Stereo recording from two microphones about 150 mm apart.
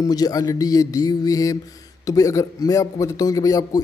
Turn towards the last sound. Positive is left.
turn(degrees=25)  # may be behind; listen again after turning